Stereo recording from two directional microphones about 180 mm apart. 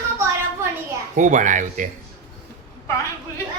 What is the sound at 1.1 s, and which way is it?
Speech, 45° right (ahead or behind).